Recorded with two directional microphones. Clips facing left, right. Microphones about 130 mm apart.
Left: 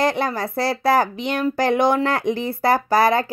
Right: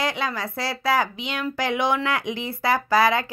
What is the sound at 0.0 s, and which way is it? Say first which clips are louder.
Speech: left 6 dB; 45° left (ahead or behind).